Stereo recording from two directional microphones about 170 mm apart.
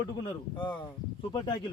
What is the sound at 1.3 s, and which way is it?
Speech, 25° left (ahead or behind).